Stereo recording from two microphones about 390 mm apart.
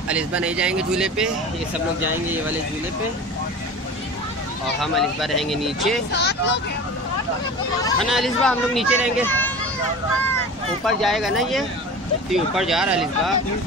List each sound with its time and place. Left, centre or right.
0.1 s speech: centre
4.9 s speech: centre
6.1 s speech: left
7.8 s speech: centre
10.9 s speech: centre